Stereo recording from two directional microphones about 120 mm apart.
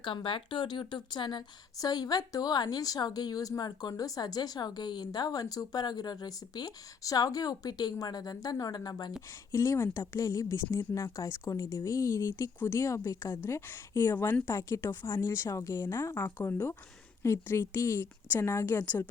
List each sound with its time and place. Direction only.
0.0 s a woman's voice: 45° left (ahead or behind)
9.5 s speech: 25° left (ahead or behind)